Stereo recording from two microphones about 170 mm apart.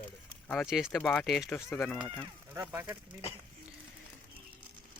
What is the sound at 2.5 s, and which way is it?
Speech, 15° right (ahead or behind).